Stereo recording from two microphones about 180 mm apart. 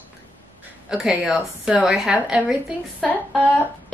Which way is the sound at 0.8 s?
5° right (ahead or behind).